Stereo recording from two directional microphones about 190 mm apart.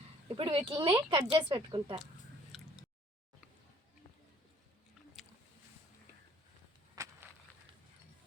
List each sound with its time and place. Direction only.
0.3 s speech: 30° right (ahead or behind)
2.5 s squish: centre (ahead or behind)
6.9 s a sound: 15° right (ahead or behind)